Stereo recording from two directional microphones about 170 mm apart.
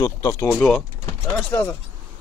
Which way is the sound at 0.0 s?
20° left (ahead or behind).